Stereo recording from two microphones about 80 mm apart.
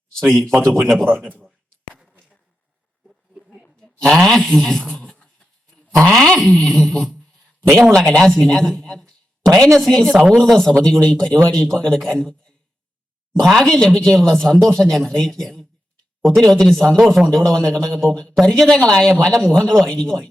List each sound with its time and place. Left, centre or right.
0.1 s speech: centre
1.2 s a man's voice: centre
2.0 s a sound: centre
6.1 s a man's voice: centre
13.5 s speech: centre